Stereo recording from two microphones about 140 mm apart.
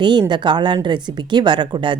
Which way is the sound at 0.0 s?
35° right (ahead or behind).